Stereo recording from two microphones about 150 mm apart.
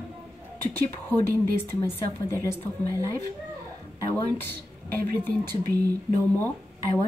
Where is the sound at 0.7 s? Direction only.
15° left (ahead or behind).